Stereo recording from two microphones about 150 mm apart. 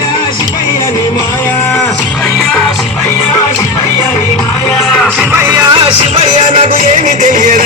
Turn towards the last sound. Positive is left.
turn(degrees=-60)  # may be behind; listen again after turning